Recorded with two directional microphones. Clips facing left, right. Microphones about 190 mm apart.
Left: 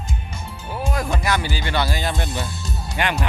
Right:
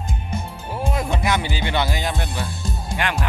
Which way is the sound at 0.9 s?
20° right (ahead or behind).